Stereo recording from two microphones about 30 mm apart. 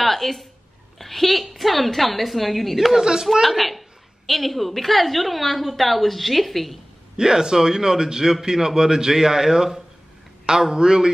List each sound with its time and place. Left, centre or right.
0.0 s a woman's voice: centre
2.9 s a man's voice: centre
3.4 s a woman's voice: centre
7.2 s a man's voice: right